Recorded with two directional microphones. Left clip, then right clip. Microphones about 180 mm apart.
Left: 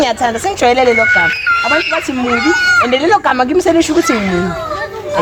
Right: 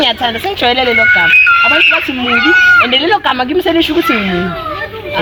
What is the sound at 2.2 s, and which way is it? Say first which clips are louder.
Speech: right 4 dB; 45° right (ahead or behind).